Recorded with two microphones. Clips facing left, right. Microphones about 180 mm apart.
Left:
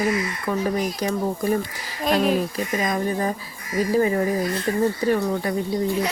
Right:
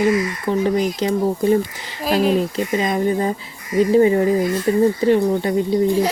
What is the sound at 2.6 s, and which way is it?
Speech, 25° right (ahead or behind).